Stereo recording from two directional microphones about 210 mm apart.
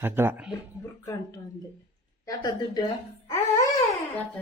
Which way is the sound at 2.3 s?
20° left (ahead or behind).